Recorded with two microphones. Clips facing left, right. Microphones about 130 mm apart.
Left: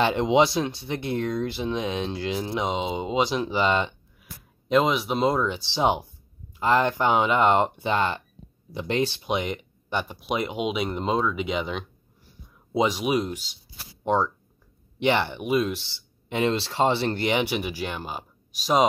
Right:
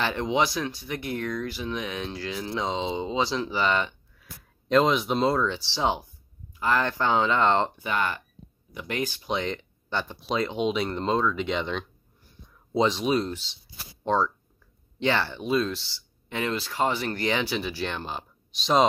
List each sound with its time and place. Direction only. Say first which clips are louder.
0.0 s speech: left 5 dB; 20° left (ahead or behind)
4.6 s speech: even; 5° left (ahead or behind)
7.8 s speech: left 3 dB; 25° left (ahead or behind); by 18.9 s 10° left (ahead or behind)